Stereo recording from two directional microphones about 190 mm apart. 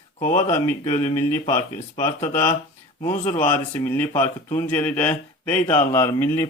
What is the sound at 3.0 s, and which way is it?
Speech, 35° left (ahead or behind).